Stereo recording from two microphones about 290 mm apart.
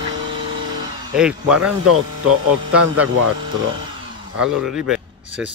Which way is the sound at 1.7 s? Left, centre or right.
Right.